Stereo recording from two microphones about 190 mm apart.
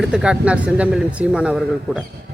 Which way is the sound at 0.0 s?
5° right (ahead or behind).